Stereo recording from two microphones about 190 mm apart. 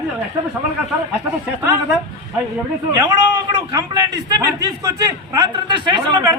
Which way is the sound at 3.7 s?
20° right (ahead or behind).